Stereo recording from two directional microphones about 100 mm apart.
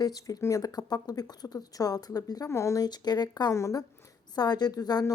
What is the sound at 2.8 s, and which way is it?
Speech, 45° left (ahead or behind).